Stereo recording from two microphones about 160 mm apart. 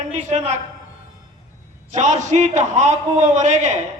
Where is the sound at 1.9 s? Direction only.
50° right (ahead or behind).